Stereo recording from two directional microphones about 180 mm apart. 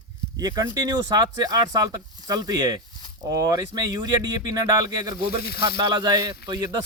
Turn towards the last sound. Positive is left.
turn(degrees=-20)  # may be behind; listen again after turning